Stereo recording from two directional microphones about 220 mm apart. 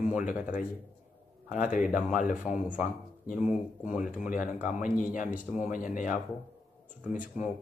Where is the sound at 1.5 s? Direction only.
35° left (ahead or behind).